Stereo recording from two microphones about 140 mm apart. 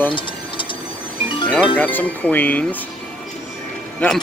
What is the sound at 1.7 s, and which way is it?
Speech, 10° left (ahead or behind).